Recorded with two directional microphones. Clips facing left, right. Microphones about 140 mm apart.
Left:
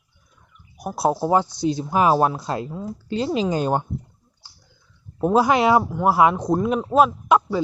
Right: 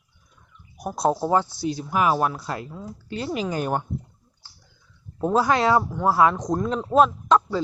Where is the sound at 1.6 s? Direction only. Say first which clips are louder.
Left 4 dB; 25° left (ahead or behind).